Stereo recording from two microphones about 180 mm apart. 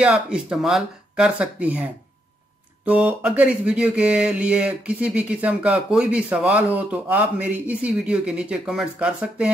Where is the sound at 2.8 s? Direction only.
5° right (ahead or behind).